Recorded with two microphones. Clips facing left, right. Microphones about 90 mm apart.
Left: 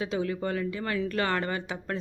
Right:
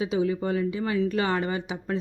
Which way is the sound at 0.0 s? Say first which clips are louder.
Right 4 dB; 15° right (ahead or behind).